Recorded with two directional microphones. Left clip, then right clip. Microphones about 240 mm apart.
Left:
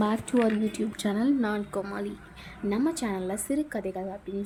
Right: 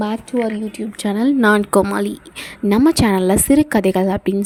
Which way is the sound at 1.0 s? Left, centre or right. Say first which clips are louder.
Right 13 dB; right.